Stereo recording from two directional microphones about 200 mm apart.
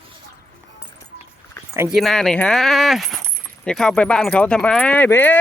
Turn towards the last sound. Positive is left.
turn(degrees=10)  # may be behind; listen again after turning